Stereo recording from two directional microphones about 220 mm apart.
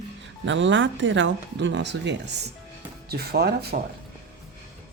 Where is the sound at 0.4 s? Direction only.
55° right (ahead or behind).